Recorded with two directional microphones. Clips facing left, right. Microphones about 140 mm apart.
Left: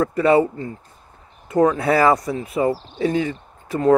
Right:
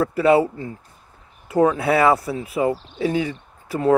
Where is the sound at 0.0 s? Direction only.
5° right (ahead or behind).